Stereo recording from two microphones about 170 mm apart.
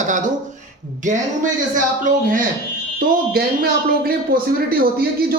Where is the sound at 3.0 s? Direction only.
60° right (ahead or behind).